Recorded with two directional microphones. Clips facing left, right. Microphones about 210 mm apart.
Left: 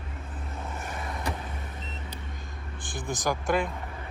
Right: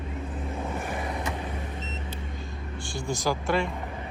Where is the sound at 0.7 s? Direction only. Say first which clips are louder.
Right 5 dB; 15° right (ahead or behind).